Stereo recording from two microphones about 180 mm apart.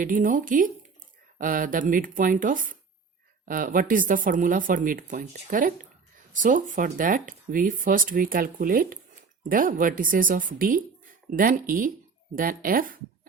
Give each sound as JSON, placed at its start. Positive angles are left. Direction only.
{"t": 0.0, "sound": "speech", "side_deg": -50}